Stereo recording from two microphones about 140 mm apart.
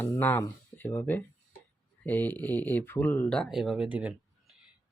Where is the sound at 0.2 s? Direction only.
15° left (ahead or behind).